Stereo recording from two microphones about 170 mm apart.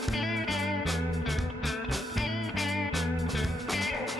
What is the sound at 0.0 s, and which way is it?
Music, centre (ahead or behind).